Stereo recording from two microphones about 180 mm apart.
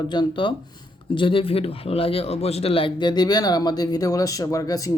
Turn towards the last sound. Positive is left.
turn(degrees=20)  # may be behind; listen again after turning